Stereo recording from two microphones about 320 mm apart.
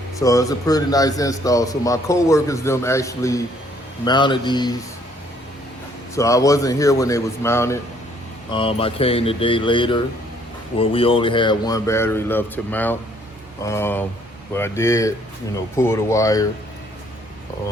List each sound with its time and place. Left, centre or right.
0.2 s speech: centre
6.1 s speech: centre